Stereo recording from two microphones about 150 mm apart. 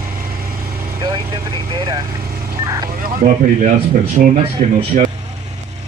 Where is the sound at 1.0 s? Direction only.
25° right (ahead or behind).